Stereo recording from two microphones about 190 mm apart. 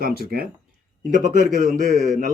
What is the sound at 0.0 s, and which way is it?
Speech, 55° right (ahead or behind).